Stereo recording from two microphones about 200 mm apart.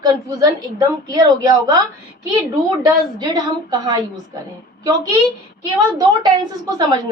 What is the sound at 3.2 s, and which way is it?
Speech, 20° right (ahead or behind).